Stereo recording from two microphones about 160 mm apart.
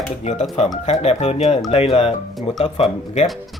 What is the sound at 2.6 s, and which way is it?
Speech, 40° left (ahead or behind).